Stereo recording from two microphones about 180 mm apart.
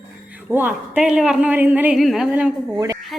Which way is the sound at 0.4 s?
10° right (ahead or behind).